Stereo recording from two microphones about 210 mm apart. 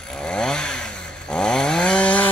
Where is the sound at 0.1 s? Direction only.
5° left (ahead or behind).